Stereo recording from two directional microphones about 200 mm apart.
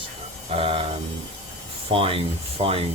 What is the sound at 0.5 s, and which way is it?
Speech, 30° right (ahead or behind).